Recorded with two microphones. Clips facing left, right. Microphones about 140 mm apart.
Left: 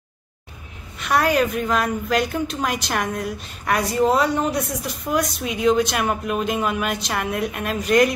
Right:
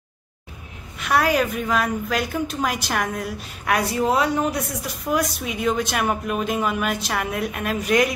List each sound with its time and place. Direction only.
0.9 s a woman's voice: centre (ahead or behind)